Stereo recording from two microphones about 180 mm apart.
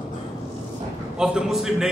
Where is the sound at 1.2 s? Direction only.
5° right (ahead or behind).